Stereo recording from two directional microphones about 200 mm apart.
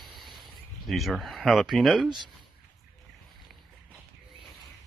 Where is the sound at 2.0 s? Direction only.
20° right (ahead or behind).